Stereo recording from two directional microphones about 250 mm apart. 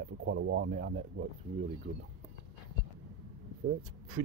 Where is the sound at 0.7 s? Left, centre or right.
Right.